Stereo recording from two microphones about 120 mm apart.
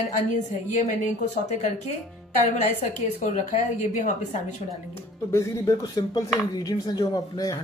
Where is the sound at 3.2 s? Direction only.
90° left.